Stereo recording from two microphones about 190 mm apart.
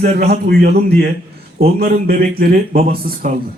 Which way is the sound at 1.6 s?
50° right (ahead or behind).